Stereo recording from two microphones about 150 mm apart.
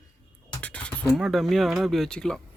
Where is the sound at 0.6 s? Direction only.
10° left (ahead or behind).